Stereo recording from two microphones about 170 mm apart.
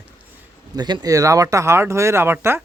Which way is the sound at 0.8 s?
25° right (ahead or behind).